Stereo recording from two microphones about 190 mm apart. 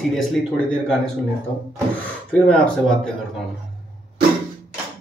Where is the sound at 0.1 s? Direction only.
Centre (ahead or behind).